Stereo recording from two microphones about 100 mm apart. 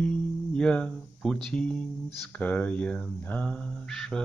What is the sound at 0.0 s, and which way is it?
Music, 10° left (ahead or behind).